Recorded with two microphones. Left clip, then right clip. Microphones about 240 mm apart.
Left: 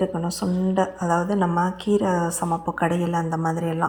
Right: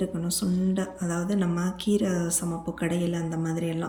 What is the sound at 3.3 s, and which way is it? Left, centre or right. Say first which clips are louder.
Speech: left 6 dB; left.